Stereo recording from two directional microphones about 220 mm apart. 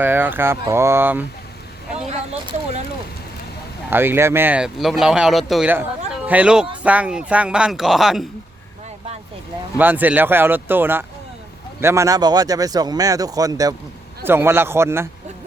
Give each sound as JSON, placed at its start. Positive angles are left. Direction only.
{"t": 0.0, "sound": "speech", "side_deg": -10}
{"t": 2.0, "sound": "a sound", "side_deg": -30}
{"t": 3.8, "sound": "speech", "side_deg": -10}
{"t": 9.7, "sound": "speech", "side_deg": -10}